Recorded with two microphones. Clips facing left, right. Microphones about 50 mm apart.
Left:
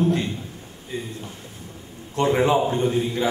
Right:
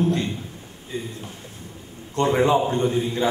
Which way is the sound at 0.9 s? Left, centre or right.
Centre.